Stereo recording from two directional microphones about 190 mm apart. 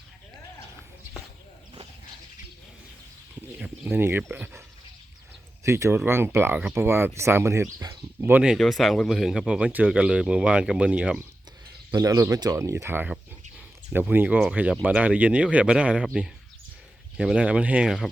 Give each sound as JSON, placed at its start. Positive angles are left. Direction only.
{"t": 3.6, "sound": "speech", "side_deg": -10}
{"t": 5.6, "sound": "speech", "side_deg": -15}
{"t": 11.9, "sound": "speech", "side_deg": -20}
{"t": 17.2, "sound": "speech", "side_deg": -5}